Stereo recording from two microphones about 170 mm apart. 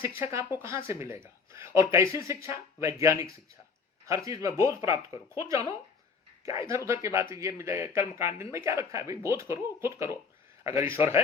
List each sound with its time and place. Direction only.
0.2 s speech: 15° right (ahead or behind)
4.8 s speech: 35° left (ahead or behind)
5.3 s speech: 15° right (ahead or behind)